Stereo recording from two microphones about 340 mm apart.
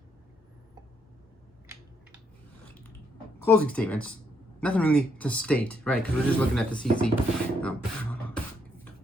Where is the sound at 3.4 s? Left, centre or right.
Centre.